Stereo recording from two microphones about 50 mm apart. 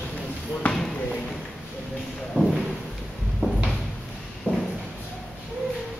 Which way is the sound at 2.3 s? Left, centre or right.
Left.